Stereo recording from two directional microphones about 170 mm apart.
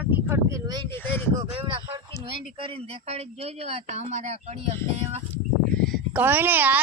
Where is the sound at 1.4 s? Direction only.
30° right (ahead or behind).